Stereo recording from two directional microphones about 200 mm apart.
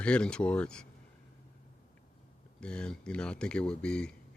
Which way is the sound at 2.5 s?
5° left (ahead or behind).